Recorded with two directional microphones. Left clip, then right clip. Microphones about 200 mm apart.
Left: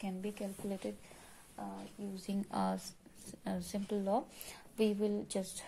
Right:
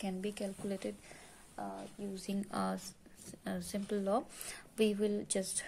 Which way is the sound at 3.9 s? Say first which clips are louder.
Right 1 dB; 10° right (ahead or behind).